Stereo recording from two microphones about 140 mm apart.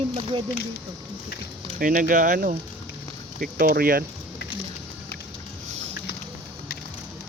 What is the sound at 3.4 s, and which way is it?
Speech, 90° right.